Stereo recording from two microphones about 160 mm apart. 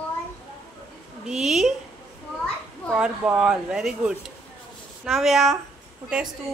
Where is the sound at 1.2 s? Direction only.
Centre (ahead or behind).